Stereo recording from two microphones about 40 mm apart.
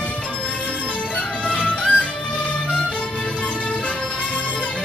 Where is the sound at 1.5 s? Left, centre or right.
Left.